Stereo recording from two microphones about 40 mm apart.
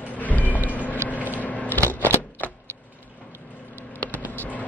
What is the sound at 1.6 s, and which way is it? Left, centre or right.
Shuffling cards, left.